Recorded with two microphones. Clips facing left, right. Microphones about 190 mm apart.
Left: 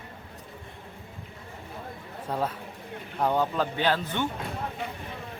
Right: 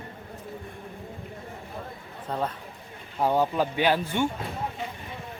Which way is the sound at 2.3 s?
10° left (ahead or behind).